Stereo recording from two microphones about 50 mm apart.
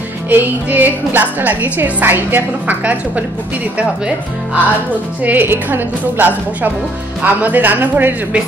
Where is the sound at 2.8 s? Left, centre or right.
Right.